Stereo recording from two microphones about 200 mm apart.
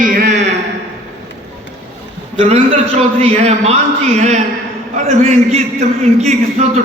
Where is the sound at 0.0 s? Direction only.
40° right (ahead or behind).